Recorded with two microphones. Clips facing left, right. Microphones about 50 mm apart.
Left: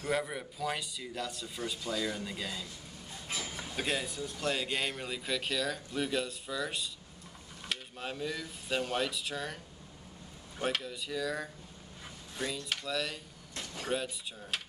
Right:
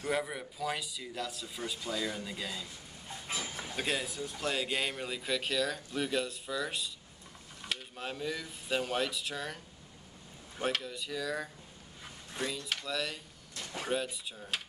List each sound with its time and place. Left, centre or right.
0.0 s speech: centre
3.1 s train: centre
3.5 s speech: centre
10.6 s speech: centre